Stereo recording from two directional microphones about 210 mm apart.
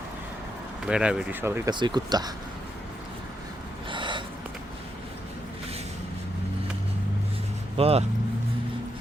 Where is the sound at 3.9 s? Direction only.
20° right (ahead or behind).